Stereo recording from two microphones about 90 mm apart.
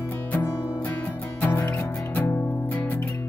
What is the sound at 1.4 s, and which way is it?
Music, 20° left (ahead or behind).